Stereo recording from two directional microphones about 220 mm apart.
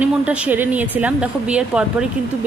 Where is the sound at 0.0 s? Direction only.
5° right (ahead or behind).